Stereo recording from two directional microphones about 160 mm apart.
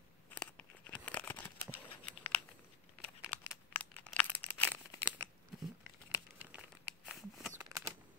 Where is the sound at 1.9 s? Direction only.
10° left (ahead or behind).